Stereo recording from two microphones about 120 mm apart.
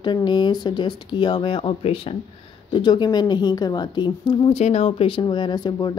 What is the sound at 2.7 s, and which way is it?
A woman's voice, 40° left (ahead or behind).